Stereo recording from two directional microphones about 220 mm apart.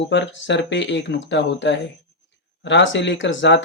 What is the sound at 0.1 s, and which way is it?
Speech, 55° left (ahead or behind).